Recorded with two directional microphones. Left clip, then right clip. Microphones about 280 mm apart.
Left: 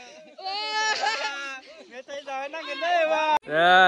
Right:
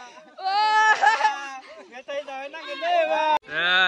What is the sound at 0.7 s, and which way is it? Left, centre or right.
Laughter, centre.